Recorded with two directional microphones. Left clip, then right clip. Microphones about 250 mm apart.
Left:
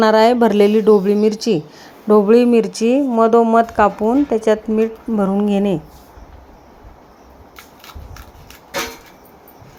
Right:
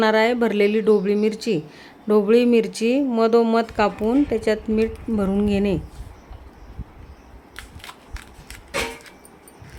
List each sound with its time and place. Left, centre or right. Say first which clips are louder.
0.0 s speech: left 6 dB; centre